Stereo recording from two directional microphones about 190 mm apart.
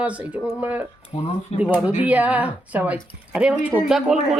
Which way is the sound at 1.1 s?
30° left (ahead or behind).